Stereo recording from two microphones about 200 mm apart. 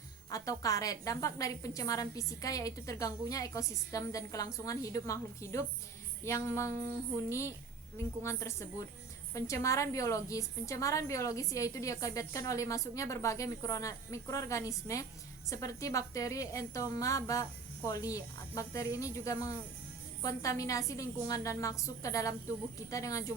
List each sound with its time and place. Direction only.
0.3 s a woman's voice: 15° left (ahead or behind)